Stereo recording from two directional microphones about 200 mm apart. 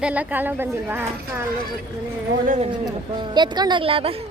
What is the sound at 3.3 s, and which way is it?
Speech, 20° right (ahead or behind).